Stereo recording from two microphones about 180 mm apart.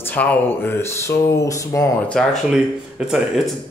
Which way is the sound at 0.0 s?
10° left (ahead or behind).